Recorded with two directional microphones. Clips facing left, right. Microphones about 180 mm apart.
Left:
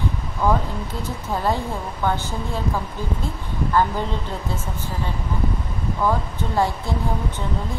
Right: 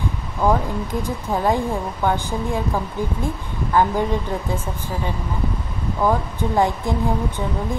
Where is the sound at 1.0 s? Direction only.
15° right (ahead or behind).